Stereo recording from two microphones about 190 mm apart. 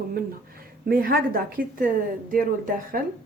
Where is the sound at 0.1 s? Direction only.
50° right (ahead or behind).